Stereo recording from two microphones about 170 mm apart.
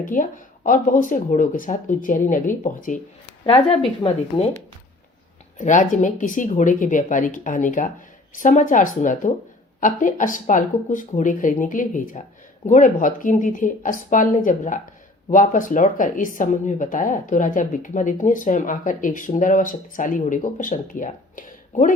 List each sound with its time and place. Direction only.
0.0 s speech: 55° left (ahead or behind)
3.4 s speech: 35° left (ahead or behind)
5.5 s speech: 45° left (ahead or behind)